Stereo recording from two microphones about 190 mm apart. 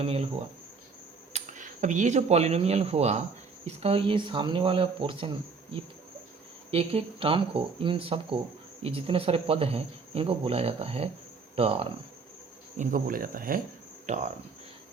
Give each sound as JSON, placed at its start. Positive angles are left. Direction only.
{"t": 0.0, "sound": "speech", "side_deg": -30}
{"t": 1.3, "sound": "speech", "side_deg": -40}
{"t": 6.7, "sound": "speech", "side_deg": -30}
{"t": 12.7, "sound": "speech", "side_deg": -40}